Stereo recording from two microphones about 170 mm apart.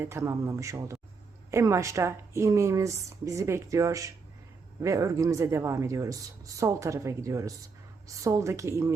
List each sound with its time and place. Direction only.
0.0 s speech: 15° right (ahead or behind)